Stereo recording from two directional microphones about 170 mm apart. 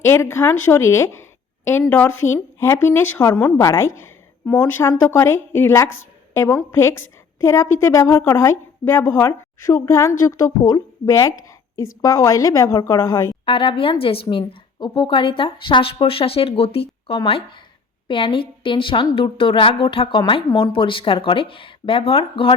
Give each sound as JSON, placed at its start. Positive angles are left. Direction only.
{"t": 0.0, "sound": "a woman's voice", "side_deg": 15}
{"t": 13.4, "sound": "a woman's voice", "side_deg": 30}